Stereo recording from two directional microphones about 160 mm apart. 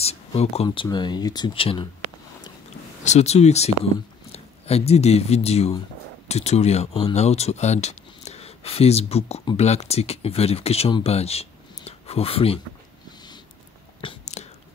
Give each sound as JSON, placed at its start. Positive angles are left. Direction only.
{"t": 0.0, "sound": "speech", "side_deg": 40}
{"t": 0.7, "sound": "speech", "side_deg": 25}
{"t": 3.0, "sound": "speech", "side_deg": 45}
{"t": 14.0, "sound": "whispering", "side_deg": 45}